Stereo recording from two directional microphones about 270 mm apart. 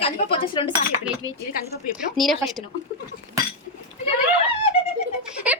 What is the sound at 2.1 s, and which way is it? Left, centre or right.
Speech, centre.